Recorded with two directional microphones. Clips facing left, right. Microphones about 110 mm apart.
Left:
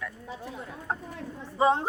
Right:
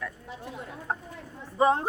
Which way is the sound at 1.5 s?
25° left (ahead or behind).